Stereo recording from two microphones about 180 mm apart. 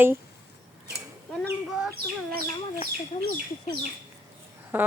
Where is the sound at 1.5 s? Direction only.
5° right (ahead or behind).